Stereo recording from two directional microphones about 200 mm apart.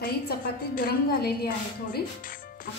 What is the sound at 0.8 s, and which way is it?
A woman's voice, 50° left (ahead or behind).